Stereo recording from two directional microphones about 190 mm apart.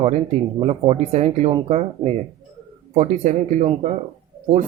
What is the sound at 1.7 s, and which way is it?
Speech, 35° right (ahead or behind).